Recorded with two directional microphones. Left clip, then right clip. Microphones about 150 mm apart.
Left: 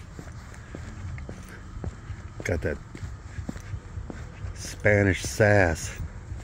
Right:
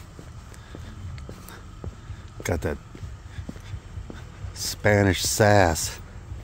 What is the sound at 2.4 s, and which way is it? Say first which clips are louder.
Speech: right 1 dB; 45° right (ahead or behind).